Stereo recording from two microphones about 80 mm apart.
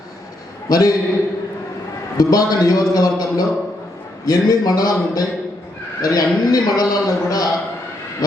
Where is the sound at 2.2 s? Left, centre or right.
Left.